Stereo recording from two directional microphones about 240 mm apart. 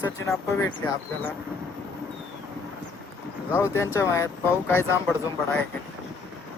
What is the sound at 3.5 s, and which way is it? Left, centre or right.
Speech, centre.